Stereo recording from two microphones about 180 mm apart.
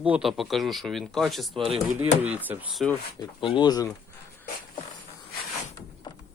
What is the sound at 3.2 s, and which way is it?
Speech, 25° left (ahead or behind).